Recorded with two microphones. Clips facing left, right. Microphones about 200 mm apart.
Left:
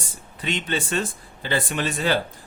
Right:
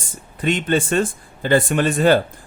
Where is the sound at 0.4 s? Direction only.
50° right (ahead or behind).